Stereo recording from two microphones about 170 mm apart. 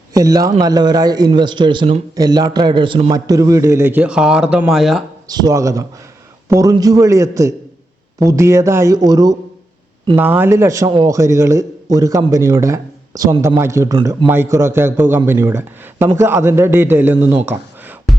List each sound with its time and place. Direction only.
0.1 s a man's voice: 20° right (ahead or behind); by 5.0 s centre (ahead or behind)
5.3 s a man's voice: 20° right (ahead or behind)